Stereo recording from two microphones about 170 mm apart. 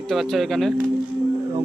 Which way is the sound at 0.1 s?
Centre (ahead or behind).